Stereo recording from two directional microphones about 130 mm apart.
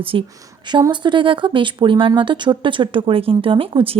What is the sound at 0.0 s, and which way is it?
Speech, 45° right (ahead or behind).